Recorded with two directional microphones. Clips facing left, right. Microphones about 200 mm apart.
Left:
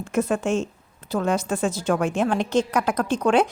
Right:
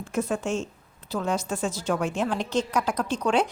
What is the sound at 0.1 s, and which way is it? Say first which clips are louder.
A woman's voice: left 5 dB; 60° left (ahead or behind).